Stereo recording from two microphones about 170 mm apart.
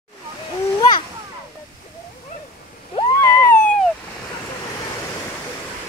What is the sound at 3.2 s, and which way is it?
Cat, 15° left (ahead or behind).